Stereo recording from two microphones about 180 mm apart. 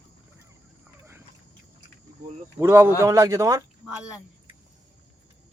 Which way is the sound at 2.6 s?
15° right (ahead or behind).